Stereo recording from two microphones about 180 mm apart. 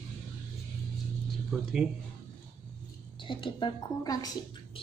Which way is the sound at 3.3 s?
25° left (ahead or behind).